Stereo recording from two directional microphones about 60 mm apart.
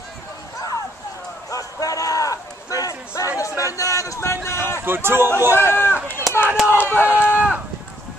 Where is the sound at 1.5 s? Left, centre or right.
Left.